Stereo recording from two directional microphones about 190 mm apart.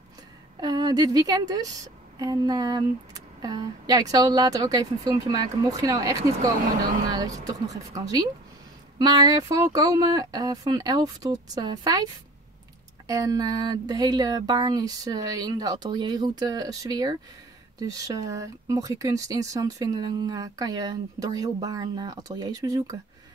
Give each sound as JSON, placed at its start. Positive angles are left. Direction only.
{"t": 0.6, "sound": "a woman's voice", "side_deg": -20}
{"t": 13.0, "sound": "speech", "side_deg": -20}